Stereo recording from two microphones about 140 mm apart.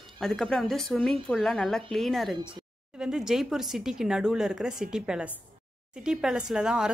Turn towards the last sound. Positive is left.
turn(degrees=-5)  # may be behind; listen again after turning